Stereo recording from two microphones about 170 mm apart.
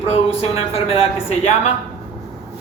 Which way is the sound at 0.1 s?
35° left (ahead or behind).